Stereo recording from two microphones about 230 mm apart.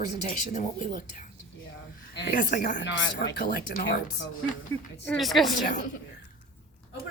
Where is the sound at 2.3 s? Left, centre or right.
Left.